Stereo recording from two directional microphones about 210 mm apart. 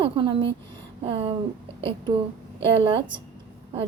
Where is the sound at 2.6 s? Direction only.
25° right (ahead or behind).